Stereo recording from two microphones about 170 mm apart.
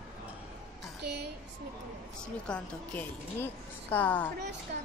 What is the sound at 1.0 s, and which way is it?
Speech, 75° right (ahead or behind).